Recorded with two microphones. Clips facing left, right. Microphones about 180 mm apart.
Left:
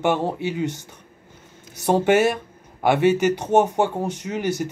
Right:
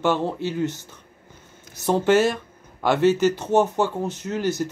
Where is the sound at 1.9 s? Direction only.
55° left (ahead or behind).